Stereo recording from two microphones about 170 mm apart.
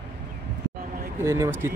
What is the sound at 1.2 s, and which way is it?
Speech, 15° right (ahead or behind).